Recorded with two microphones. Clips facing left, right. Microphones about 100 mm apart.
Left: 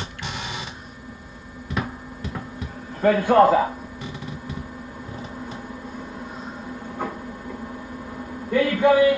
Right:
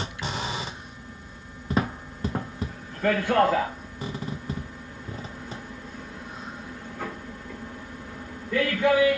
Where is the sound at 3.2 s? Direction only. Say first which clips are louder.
Left 7 dB; 30° left (ahead or behind).